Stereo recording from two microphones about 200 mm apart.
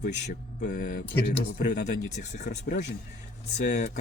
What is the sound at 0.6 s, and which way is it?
Speech, 40° left (ahead or behind).